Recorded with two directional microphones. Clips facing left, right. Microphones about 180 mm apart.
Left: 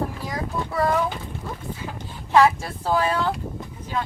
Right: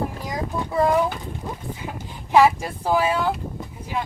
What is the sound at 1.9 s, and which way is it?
Speech, 15° right (ahead or behind).